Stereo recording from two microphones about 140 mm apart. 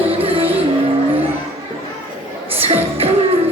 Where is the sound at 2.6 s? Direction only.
45° right (ahead or behind).